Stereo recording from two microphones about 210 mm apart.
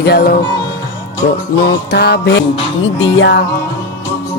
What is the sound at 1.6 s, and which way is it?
Music, 50° left (ahead or behind).